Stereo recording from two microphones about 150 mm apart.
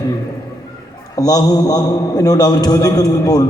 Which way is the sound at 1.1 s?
25° left (ahead or behind).